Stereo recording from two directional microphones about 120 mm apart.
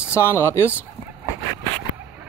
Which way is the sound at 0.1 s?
20° left (ahead or behind).